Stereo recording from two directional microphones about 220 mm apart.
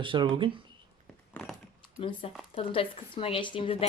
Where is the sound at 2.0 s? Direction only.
25° left (ahead or behind).